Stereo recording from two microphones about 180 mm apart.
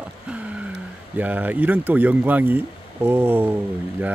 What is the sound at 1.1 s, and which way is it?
Speech, 10° right (ahead or behind).